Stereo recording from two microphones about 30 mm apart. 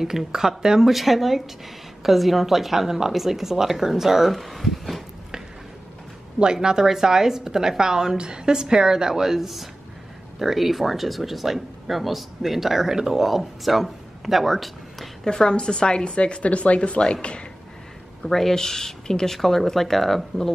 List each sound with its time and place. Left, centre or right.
0.0 s a woman's voice: centre
0.8 s a woman's voice: centre
4.3 s speech: centre
6.4 s a woman's voice: right; by 15.0 s centre
15.2 s a woman's voice: left
16.4 s speech: left
18.2 s speech: centre